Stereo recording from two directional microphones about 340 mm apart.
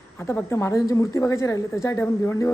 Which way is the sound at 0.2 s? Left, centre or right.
Centre.